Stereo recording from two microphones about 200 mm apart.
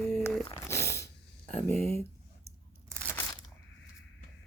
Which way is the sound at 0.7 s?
15° left (ahead or behind).